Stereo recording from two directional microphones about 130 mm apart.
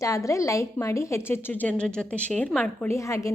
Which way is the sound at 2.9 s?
25° left (ahead or behind).